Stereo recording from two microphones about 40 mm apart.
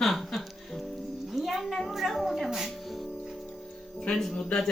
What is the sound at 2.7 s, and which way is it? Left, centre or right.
Music, centre.